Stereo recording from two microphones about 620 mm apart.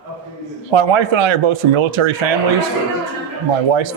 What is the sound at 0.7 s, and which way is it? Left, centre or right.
Speech, right.